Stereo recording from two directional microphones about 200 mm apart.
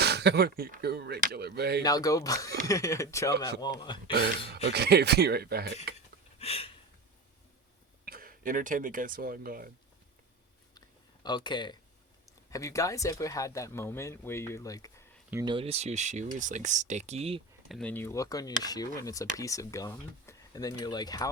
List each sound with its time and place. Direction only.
0.0 s speech: 55° right (ahead or behind)
1.8 s speech: 20° left (ahead or behind)
4.7 s speech: 55° right (ahead or behind)
6.4 s a sound: 30° left (ahead or behind)
8.0 s speech: 45° right (ahead or behind)
10.8 s a sound: 20° left (ahead or behind)
12.5 s speech: 15° left (ahead or behind)
15.3 s speech: 15° right (ahead or behind)
15.5 s speech: 30° right (ahead or behind)
17.7 s speech: 5° left (ahead or behind)